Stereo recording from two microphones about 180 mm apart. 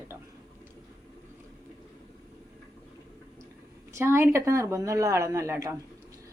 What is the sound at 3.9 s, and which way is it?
Speech, 15° right (ahead or behind).